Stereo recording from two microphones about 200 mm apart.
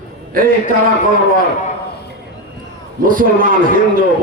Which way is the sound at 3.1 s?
45° right (ahead or behind).